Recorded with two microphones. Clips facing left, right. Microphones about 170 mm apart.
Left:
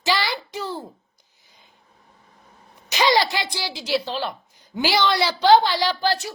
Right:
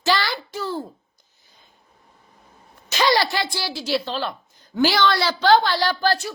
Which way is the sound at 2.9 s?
15° left (ahead or behind).